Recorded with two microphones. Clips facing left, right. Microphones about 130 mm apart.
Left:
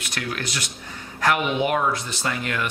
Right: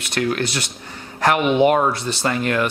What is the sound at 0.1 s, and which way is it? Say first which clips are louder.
Speech: right 10 dB; 30° right (ahead or behind).